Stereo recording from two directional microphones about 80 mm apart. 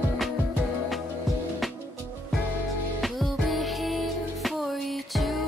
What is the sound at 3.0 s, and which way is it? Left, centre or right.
Music, centre.